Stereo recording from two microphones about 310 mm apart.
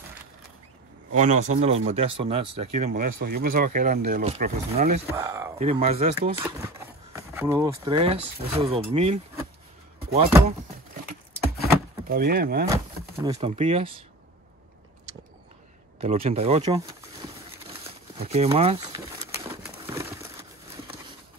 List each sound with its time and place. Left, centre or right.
1.1 s speech: right
5.1 s speech: centre
5.6 s speech: centre
7.2 s speech: centre
11.6 s a sound: right
12.6 s speech: centre
16.0 s speech: centre
17.8 s pigeon: centre